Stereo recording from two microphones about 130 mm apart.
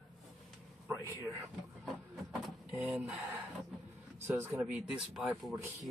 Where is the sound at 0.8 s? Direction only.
20° right (ahead or behind).